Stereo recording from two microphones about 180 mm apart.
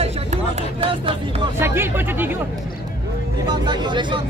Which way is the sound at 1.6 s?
10° right (ahead or behind).